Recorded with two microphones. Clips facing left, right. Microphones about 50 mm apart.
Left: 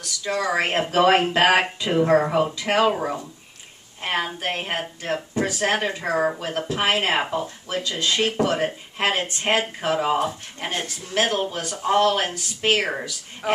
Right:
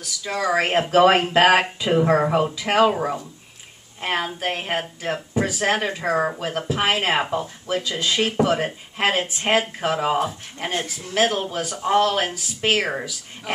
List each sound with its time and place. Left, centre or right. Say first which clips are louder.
0.0 s speech: even; centre